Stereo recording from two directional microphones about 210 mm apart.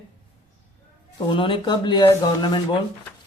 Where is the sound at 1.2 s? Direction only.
25° left (ahead or behind).